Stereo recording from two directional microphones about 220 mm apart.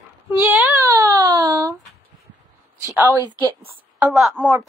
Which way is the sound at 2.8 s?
10° right (ahead or behind).